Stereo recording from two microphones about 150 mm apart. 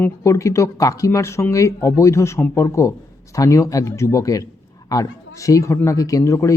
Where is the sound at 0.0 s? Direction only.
20° left (ahead or behind).